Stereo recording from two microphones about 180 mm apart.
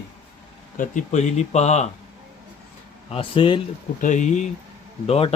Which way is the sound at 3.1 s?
30° left (ahead or behind).